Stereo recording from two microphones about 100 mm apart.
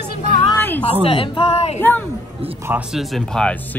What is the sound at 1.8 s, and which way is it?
Speech, 20° left (ahead or behind).